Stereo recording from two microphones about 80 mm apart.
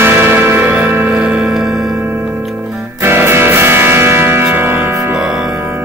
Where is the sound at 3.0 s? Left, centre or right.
Right.